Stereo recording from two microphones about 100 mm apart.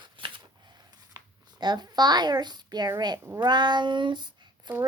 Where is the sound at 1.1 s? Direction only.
45° right (ahead or behind).